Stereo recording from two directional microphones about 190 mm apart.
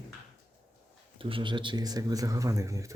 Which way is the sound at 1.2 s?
25° right (ahead or behind).